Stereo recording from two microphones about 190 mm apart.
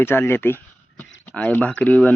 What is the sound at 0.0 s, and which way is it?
A man's voice, 10° left (ahead or behind).